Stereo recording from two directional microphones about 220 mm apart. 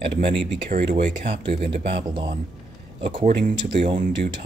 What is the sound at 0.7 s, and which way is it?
Speech, 35° right (ahead or behind).